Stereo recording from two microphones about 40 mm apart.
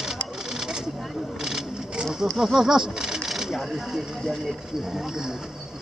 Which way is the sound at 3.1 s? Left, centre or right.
Centre.